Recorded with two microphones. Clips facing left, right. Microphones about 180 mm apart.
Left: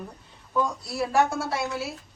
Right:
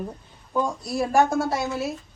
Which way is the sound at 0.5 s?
20° right (ahead or behind).